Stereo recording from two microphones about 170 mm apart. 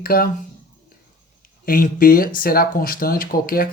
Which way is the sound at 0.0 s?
60° left (ahead or behind).